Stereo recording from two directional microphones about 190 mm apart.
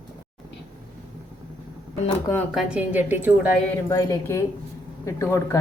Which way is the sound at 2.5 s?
5° right (ahead or behind).